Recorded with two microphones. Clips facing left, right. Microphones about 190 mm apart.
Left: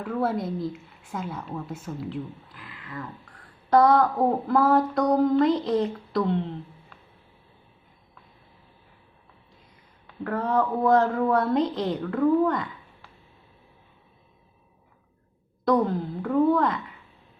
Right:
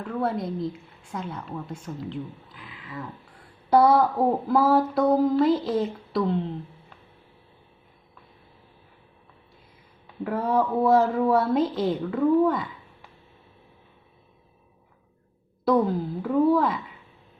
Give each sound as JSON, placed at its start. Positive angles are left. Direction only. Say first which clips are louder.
{"t": 0.0, "sound": "a woman's voice", "louder": "left 1 dB", "side_deg": 5}
{"t": 10.2, "sound": "a woman's voice", "louder": "right 1 dB", "side_deg": -10}
{"t": 15.6, "sound": "a woman's voice", "louder": "right 1 dB", "side_deg": -5}